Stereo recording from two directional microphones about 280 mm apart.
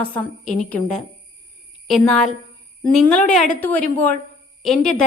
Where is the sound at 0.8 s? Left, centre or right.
Left.